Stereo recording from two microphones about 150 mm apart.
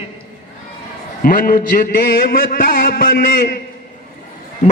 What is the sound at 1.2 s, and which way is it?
A man's voice, 70° left (ahead or behind).